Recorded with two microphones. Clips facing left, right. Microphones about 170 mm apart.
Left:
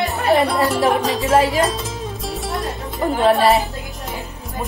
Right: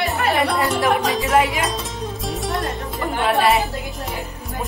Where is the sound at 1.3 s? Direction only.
35° left (ahead or behind).